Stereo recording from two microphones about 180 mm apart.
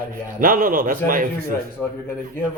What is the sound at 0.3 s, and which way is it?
Speech, 50° right (ahead or behind).